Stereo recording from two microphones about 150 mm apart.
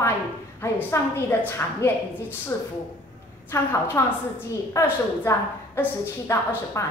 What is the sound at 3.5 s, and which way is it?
A woman's voice, 15° left (ahead or behind).